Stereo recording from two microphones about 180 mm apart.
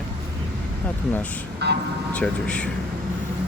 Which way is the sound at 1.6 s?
65° right (ahead or behind).